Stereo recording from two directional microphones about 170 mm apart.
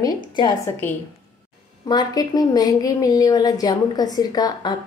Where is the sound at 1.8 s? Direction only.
25° left (ahead or behind).